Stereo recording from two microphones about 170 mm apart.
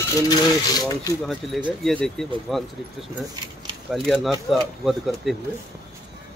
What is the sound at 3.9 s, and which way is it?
Speech, centre (ahead or behind).